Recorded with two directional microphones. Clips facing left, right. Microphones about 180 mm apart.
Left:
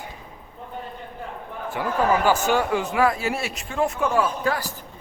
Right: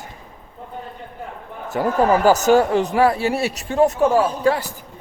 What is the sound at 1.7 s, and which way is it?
Speech, 40° right (ahead or behind).